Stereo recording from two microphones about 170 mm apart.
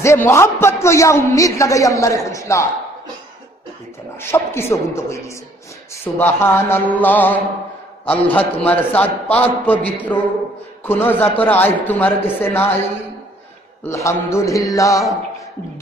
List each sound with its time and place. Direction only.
0.0 s a man's voice: 15° left (ahead or behind)
4.2 s a man's voice: 15° left (ahead or behind)
13.8 s music: 15° left (ahead or behind)